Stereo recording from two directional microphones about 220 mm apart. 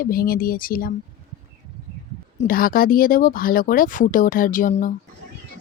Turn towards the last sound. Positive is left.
turn(degrees=35)  # may be behind; listen again after turning